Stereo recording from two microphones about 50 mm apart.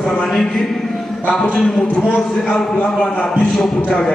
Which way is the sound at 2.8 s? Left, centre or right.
Centre.